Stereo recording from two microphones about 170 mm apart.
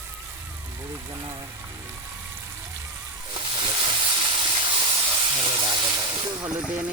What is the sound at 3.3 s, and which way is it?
Steam, 25° right (ahead or behind).